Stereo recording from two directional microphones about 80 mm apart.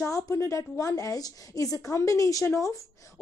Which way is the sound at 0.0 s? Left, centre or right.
Left.